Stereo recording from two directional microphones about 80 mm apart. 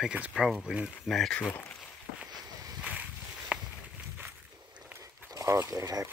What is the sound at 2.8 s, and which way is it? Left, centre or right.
Boat, centre.